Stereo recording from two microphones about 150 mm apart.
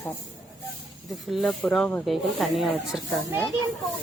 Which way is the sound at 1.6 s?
10° left (ahead or behind).